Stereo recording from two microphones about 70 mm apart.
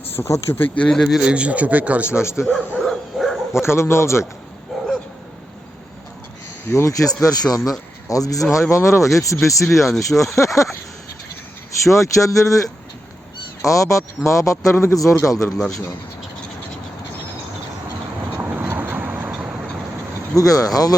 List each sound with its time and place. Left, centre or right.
0.2 s speech: left
0.8 s speech: centre
1.2 s a man's voice: centre
2.0 s speech: left
2.8 s bow-wow: centre
3.5 s speech: left
4.7 s dog: centre
6.7 s speech: left
9.6 s speech: centre
10.0 s speech: left
11.9 s speech: left
15.5 s speech: centre
18.3 s vehicle: right
20.3 s speech: left